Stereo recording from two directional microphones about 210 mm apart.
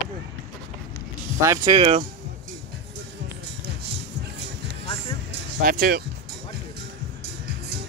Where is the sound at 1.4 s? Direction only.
25° right (ahead or behind).